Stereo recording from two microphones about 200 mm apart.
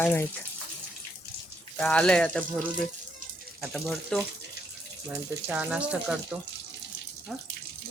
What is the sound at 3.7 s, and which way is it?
Speech, centre (ahead or behind).